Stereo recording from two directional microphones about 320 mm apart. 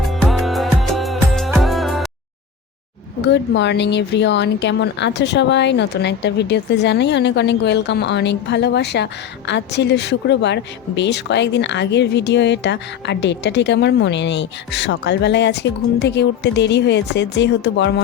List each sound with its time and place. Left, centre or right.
0.0 s music: centre
3.2 s speech: left